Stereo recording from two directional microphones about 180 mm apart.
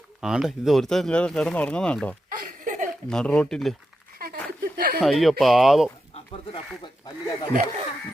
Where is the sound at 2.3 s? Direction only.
50° right (ahead or behind).